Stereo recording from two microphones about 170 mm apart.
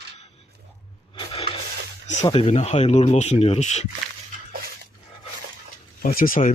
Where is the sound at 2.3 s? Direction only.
35° left (ahead or behind).